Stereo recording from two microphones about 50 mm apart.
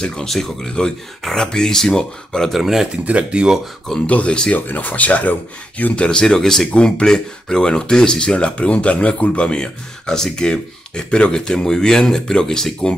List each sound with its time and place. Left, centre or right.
0.0 s speech: centre
2.5 s speech: centre
3.1 s speech: right
4.0 s speech: left
4.6 s speech: left
6.0 s speech: centre